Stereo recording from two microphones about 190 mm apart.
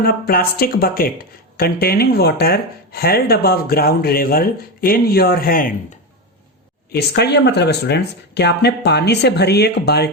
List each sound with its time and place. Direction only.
0.0 s speech: 50° left (ahead or behind)
6.9 s speech: 60° left (ahead or behind)